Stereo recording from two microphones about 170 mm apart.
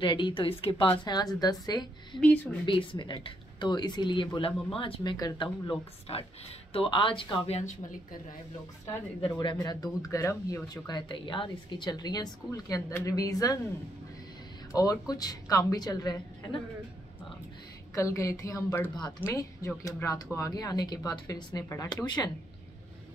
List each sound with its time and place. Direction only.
0.0 s speech: 30° left (ahead or behind)
2.1 s speech: 5° left (ahead or behind)
2.6 s speech: 30° left (ahead or behind)
9.2 s speech: 30° left (ahead or behind)
14.7 s speech: 20° left (ahead or behind)
17.9 s speech: 15° left (ahead or behind)